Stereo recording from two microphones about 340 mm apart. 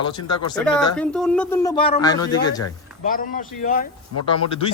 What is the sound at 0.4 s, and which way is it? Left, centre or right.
Speech, centre.